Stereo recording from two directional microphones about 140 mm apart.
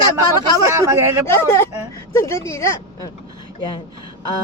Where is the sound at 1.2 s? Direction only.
20° left (ahead or behind).